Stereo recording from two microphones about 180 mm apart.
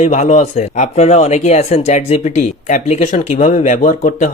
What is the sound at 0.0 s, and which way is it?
Speech, 40° left (ahead or behind).